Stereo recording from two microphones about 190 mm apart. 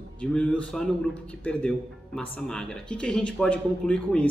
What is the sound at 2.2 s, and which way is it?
Speech, 5° left (ahead or behind).